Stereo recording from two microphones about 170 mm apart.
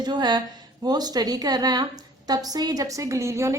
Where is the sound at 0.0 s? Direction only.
25° right (ahead or behind).